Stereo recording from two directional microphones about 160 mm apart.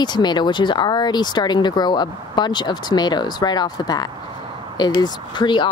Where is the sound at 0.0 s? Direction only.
25° left (ahead or behind).